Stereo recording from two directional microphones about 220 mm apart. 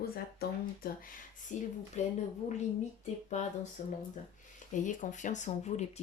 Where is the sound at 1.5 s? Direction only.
35° left (ahead or behind).